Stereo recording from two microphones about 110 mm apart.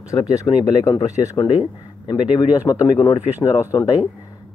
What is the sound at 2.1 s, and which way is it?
Speech, 45° left (ahead or behind).